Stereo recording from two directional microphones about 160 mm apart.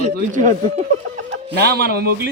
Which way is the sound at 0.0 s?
50° right (ahead or behind).